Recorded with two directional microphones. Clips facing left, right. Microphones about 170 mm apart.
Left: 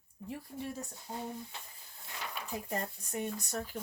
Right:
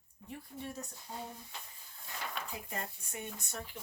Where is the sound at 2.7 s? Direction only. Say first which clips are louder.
Left 5 dB; 40° left (ahead or behind).